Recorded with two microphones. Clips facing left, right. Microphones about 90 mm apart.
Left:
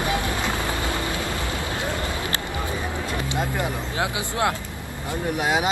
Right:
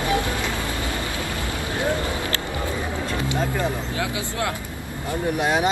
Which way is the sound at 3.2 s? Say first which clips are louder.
Right 3 dB; 15° left (ahead or behind).